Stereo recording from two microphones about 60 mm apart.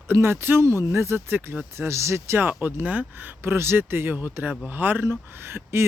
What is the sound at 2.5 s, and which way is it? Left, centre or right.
Speech, right.